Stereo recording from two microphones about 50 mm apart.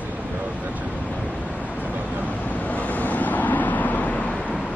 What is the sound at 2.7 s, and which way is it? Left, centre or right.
Vehicle, left.